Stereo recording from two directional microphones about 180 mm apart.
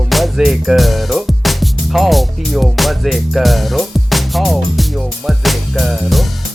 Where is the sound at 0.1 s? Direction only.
Centre (ahead or behind).